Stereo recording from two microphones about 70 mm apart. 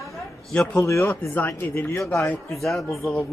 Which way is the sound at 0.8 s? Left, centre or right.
Left.